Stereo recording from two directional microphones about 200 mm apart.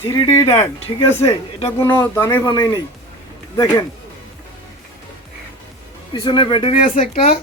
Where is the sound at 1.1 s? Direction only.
15° left (ahead or behind).